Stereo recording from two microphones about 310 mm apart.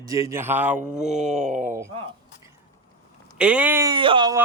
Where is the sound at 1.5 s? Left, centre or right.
Right.